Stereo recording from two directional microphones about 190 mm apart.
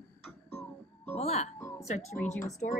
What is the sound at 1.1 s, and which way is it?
Speech, 35° left (ahead or behind).